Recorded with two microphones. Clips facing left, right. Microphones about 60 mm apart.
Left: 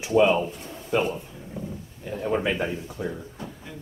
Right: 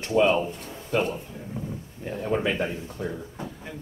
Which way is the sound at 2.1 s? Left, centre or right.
Centre.